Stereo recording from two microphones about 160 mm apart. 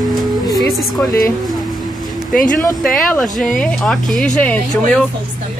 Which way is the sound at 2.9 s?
5° left (ahead or behind).